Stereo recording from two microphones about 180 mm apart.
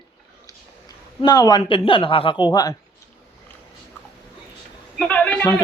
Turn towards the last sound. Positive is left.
turn(degrees=5)  # may be behind; listen again after turning